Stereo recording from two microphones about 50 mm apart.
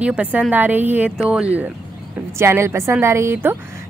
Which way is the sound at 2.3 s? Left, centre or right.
Right.